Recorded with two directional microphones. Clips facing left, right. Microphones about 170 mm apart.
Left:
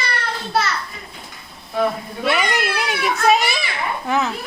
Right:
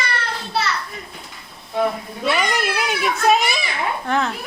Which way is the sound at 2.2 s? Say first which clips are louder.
Even; centre (ahead or behind).